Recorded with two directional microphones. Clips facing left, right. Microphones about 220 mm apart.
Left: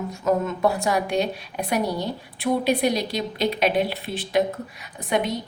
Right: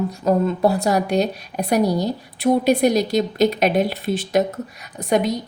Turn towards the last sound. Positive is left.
turn(degrees=-40)  # may be behind; listen again after turning